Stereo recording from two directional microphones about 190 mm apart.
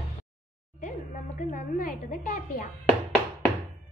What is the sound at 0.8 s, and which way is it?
A woman's voice, 40° left (ahead or behind).